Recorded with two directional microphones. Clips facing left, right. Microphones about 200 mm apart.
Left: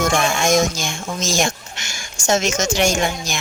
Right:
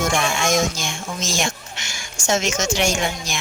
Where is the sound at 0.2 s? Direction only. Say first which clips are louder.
Left 3 dB; 40° left (ahead or behind).